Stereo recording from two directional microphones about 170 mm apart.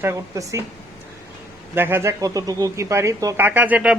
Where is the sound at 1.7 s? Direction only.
15° right (ahead or behind).